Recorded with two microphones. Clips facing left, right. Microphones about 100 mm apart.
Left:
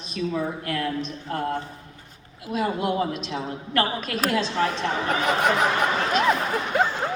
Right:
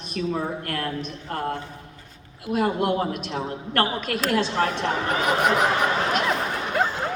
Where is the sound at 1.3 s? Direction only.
50° right (ahead or behind).